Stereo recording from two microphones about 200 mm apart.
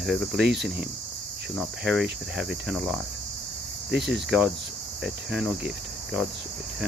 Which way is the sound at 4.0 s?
55° right (ahead or behind).